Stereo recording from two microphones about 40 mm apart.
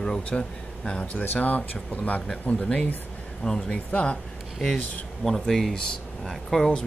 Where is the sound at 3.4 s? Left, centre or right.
Left.